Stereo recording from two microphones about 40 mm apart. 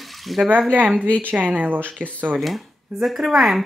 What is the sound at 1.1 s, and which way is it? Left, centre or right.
Speech, right.